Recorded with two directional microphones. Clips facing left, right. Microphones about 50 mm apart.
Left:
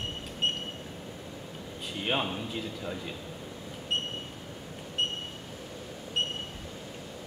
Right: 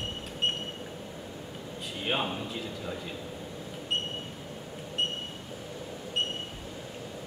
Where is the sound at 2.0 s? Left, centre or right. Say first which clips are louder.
Even; centre.